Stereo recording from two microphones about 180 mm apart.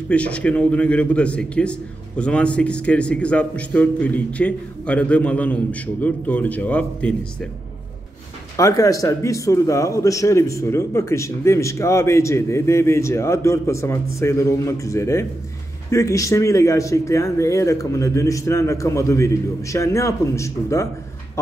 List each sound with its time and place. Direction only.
0.1 s a man's voice: 5° left (ahead or behind)
8.5 s a man's voice: 20° left (ahead or behind)